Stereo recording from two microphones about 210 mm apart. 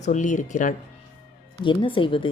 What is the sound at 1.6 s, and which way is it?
Speech, 25° left (ahead or behind).